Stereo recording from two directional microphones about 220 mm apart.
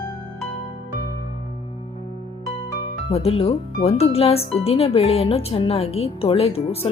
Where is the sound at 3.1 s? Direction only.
25° left (ahead or behind).